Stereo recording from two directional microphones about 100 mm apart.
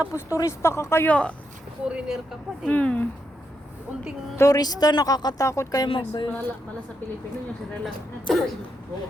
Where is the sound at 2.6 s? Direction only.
15° left (ahead or behind).